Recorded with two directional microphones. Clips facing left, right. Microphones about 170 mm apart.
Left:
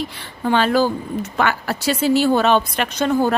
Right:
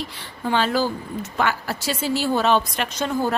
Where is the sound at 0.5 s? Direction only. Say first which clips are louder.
Left 5 dB; 60° left (ahead or behind).